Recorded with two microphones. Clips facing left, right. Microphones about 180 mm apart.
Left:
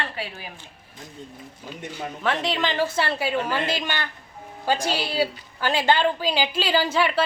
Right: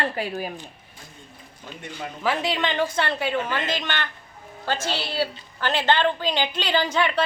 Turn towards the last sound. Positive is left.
turn(degrees=5)  # may be behind; listen again after turning